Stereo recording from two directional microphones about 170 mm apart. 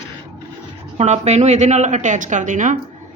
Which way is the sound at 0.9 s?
40° right (ahead or behind).